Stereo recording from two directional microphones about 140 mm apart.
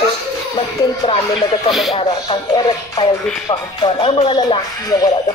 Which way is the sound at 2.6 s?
30° left (ahead or behind).